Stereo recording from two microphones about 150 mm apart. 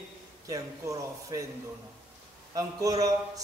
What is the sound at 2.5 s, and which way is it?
Speech, 25° right (ahead or behind).